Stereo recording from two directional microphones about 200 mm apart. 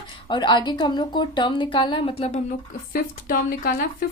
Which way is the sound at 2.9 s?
45° left (ahead or behind).